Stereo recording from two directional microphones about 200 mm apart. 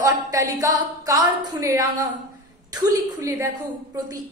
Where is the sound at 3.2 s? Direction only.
15° right (ahead or behind).